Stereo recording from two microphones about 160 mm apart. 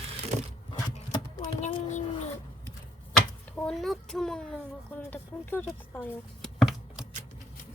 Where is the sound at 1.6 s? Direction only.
45° left (ahead or behind).